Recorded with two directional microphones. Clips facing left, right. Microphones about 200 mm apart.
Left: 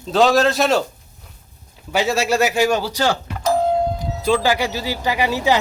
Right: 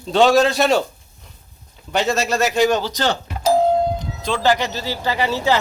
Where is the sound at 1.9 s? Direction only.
5° left (ahead or behind).